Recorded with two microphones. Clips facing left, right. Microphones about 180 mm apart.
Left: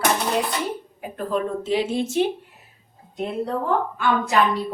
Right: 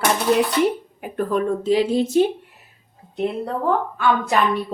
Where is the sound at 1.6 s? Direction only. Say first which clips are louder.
Right 4 dB; 40° right (ahead or behind).